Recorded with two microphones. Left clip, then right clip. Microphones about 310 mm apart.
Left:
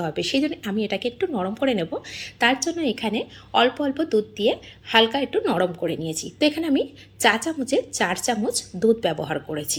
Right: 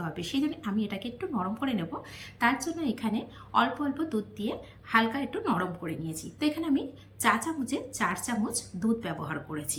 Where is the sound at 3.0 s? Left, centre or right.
Centre.